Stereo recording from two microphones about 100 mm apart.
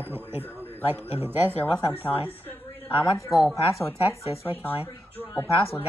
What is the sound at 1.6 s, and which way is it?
A woman's voice, 20° left (ahead or behind).